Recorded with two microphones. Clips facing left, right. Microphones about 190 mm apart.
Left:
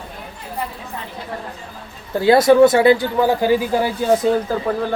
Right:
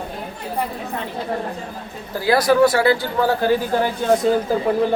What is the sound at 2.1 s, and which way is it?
Speech, 25° left (ahead or behind).